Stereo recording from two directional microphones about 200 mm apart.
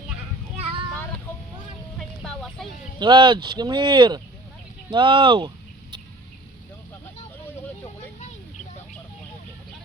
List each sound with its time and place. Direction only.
0.5 s child singing: 30° right (ahead or behind)
2.0 s a sound: centre (ahead or behind)
3.0 s speech: 20° right (ahead or behind)